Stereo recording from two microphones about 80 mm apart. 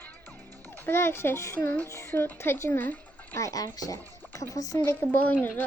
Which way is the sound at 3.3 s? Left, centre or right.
Left.